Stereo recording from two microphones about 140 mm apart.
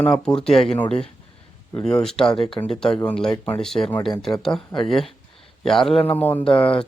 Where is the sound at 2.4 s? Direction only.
40° left (ahead or behind).